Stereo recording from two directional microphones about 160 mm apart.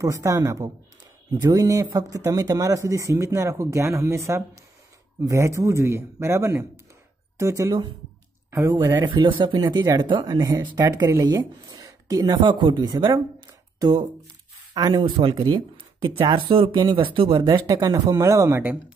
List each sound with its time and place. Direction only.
0.0 s speech: 20° right (ahead or behind)